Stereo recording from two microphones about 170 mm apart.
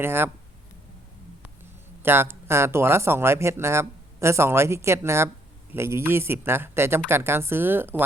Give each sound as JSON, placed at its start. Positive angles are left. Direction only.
{"t": 0.0, "sound": "speech", "side_deg": -15}
{"t": 2.0, "sound": "speech", "side_deg": -15}